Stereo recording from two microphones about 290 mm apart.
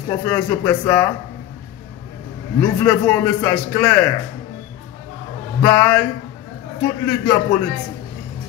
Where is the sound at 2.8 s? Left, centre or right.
Centre.